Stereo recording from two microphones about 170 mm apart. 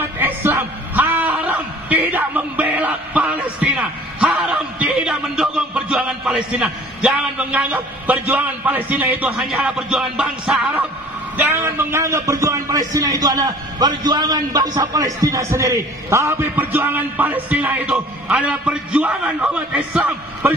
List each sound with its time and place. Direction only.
0.2 s a sound: 10° right (ahead or behind)
9.2 s music: 5° right (ahead or behind)
11.3 s a man's voice: 15° right (ahead or behind)